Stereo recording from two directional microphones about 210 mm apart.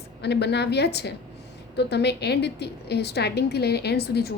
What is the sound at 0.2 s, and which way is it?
A woman's voice, 55° left (ahead or behind).